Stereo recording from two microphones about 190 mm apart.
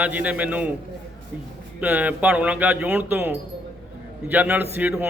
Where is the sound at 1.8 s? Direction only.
10° right (ahead or behind).